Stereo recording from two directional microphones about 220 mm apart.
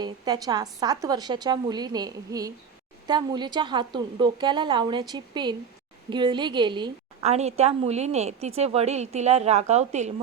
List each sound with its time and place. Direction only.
0.0 s a woman's voice: 15° right (ahead or behind)